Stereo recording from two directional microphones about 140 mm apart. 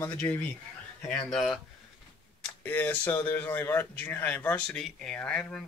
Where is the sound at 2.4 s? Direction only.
15° left (ahead or behind).